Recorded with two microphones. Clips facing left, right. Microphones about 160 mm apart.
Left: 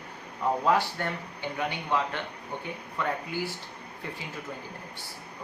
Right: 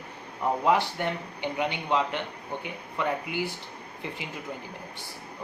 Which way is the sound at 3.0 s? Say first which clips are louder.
Right 2 dB; 15° right (ahead or behind).